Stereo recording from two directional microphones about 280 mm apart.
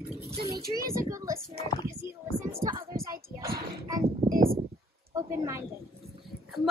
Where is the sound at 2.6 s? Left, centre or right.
Centre.